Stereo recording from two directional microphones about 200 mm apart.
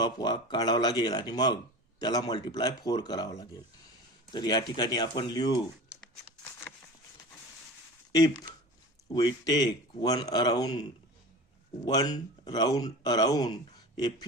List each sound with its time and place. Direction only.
0.0 s speech: 20° left (ahead or behind)
8.1 s speech: 20° left (ahead or behind)
11.9 s speech: 20° left (ahead or behind)
13.9 s a sound: 20° left (ahead or behind)